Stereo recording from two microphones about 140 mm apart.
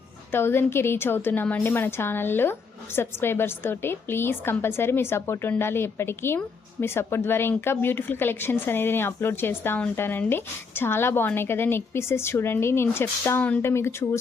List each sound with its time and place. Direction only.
0.3 s a woman's voice: 15° left (ahead or behind)